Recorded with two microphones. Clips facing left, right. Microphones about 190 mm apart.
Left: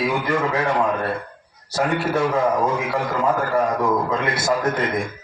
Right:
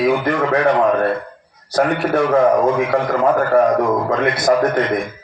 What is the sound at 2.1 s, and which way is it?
A man's voice, 55° right (ahead or behind).